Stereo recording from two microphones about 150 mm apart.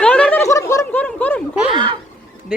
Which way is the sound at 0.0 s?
10° left (ahead or behind).